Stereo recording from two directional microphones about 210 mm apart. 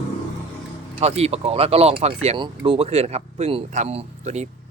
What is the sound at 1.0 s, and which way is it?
Speech, 30° right (ahead or behind).